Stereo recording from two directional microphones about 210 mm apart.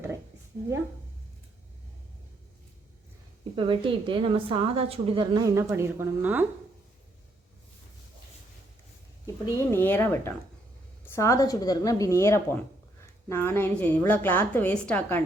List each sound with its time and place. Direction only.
3.5 s a woman's voice: 25° right (ahead or behind)
9.2 s a woman's voice: 15° left (ahead or behind)